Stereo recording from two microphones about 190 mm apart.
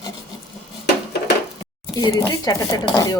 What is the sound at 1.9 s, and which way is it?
Speech, 20° left (ahead or behind).